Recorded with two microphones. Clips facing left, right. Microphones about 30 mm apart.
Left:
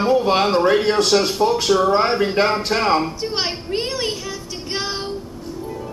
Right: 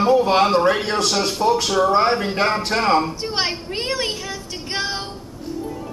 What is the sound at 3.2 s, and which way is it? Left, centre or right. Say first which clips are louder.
Speech: even; centre.